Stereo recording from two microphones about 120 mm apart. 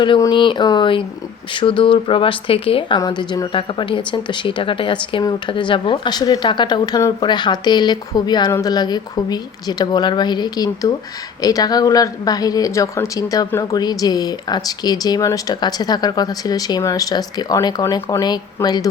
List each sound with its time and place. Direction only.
0.2 s speech: 40° left (ahead or behind)
3.0 s speech: 35° left (ahead or behind)
3.5 s speech: 45° left (ahead or behind)